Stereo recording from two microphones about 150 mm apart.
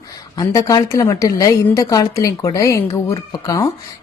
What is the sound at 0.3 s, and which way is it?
A woman's voice, 25° left (ahead or behind).